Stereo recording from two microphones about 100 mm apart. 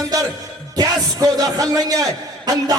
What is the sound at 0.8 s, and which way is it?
Speech, 35° right (ahead or behind).